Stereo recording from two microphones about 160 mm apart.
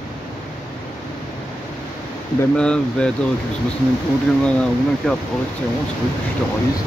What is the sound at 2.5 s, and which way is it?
Speech, 5° left (ahead or behind).